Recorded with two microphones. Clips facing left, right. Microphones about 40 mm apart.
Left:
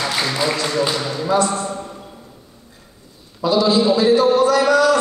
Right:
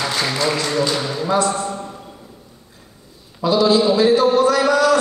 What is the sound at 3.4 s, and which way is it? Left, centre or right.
A man's voice, centre.